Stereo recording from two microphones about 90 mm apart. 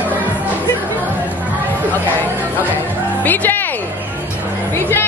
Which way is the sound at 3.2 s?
20° left (ahead or behind).